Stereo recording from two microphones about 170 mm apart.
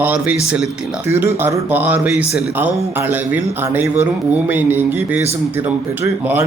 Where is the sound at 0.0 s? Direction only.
10° right (ahead or behind).